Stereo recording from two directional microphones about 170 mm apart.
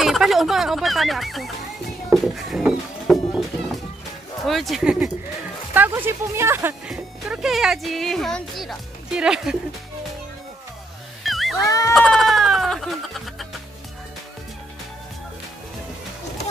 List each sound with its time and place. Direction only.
0.0 s speech: centre (ahead or behind)
2.0 s music: centre (ahead or behind)
4.5 s speech: centre (ahead or behind)
6.9 s speech: centre (ahead or behind)
11.2 s music: centre (ahead or behind)
11.6 s bleat: 20° left (ahead or behind)
11.9 s music: centre (ahead or behind)